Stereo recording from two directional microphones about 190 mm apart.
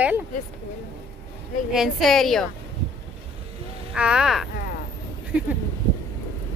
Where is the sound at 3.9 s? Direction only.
5° right (ahead or behind).